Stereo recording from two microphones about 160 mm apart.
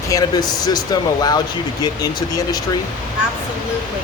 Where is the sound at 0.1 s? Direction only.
25° left (ahead or behind).